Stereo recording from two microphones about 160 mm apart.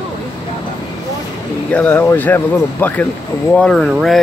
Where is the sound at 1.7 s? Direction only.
10° left (ahead or behind).